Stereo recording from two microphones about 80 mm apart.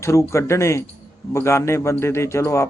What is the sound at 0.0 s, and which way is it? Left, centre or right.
A man's voice, left.